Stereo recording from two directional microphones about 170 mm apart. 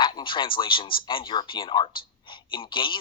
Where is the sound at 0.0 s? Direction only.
30° left (ahead or behind).